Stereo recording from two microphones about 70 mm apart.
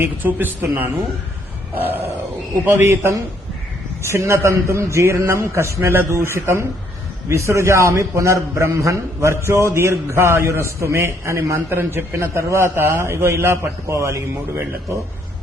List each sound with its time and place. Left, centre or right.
0.0 s a man's voice: right